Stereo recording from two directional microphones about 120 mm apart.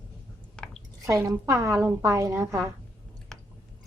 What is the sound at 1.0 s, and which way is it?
A woman's voice, 20° right (ahead or behind).